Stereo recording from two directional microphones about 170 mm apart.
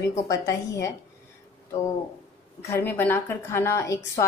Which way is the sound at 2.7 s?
15° left (ahead or behind).